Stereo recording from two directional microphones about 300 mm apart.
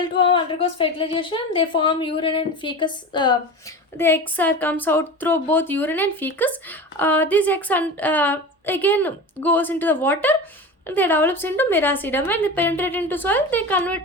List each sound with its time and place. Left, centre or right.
0.0 s speech: centre